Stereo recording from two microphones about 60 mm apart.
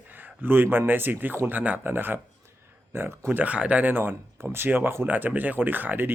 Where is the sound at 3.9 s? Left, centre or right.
Right.